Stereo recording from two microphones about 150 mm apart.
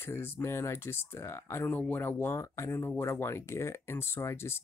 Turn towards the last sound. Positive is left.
turn(degrees=15)  # may be behind; listen again after turning